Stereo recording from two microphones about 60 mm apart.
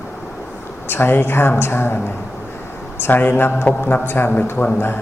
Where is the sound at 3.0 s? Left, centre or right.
Left.